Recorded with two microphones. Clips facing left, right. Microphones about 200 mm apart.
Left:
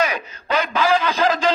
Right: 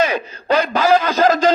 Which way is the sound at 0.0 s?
30° right (ahead or behind).